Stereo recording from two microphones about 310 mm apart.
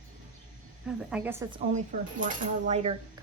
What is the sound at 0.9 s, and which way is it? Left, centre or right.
A woman's voice, centre.